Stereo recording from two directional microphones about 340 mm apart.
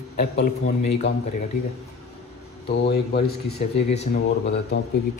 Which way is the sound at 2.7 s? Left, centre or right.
Left.